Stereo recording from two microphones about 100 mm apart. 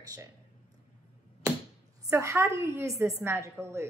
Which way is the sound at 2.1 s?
25° right (ahead or behind).